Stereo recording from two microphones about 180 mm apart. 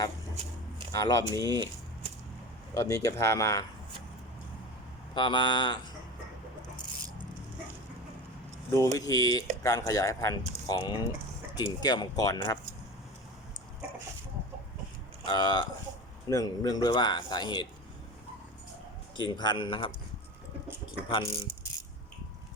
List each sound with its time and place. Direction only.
0.9 s speech: 20° left (ahead or behind)
1.5 s speech: 20° right (ahead or behind)
2.7 s speech: 20° left (ahead or behind)
5.1 s speech: 25° left (ahead or behind)
8.7 s speech: 15° left (ahead or behind)
15.2 s speech: 25° left (ahead or behind)
19.2 s speech: 25° left (ahead or behind)